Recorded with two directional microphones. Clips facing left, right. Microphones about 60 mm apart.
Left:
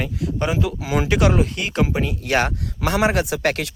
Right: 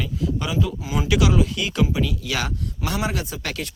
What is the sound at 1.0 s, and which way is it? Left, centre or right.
Speech, left.